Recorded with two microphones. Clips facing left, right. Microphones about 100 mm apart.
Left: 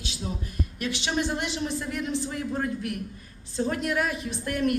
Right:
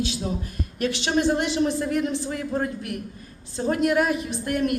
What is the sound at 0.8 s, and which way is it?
Speech, 50° right (ahead or behind).